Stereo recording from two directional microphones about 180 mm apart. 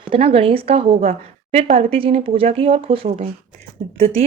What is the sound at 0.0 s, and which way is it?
A woman's voice, 30° right (ahead or behind).